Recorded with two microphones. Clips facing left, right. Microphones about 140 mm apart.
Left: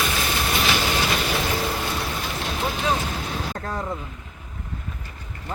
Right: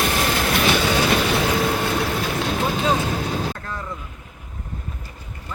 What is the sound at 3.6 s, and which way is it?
Vehicle, 40° left (ahead or behind).